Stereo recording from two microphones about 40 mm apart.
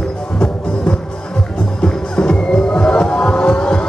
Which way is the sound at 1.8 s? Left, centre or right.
Left.